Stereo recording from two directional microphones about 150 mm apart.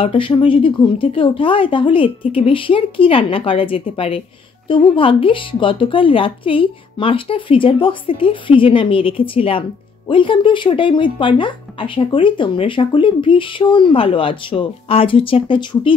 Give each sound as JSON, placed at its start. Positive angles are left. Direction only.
{"t": 0.0, "sound": "speech", "side_deg": 40}